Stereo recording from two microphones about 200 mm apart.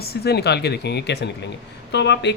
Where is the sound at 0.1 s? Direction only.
55° left (ahead or behind).